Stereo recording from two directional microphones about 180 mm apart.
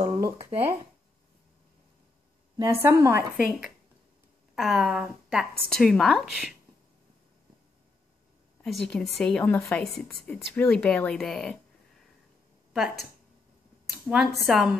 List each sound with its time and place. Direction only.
0.0 s a sound: 20° right (ahead or behind)
2.5 s a woman's voice: 15° right (ahead or behind)
4.6 s speech: centre (ahead or behind)
8.7 s speech: 5° left (ahead or behind)
12.7 s speech: centre (ahead or behind)
14.0 s speech: 5° right (ahead or behind)